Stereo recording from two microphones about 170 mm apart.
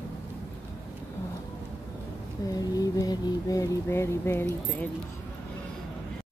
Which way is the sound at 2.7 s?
20° left (ahead or behind).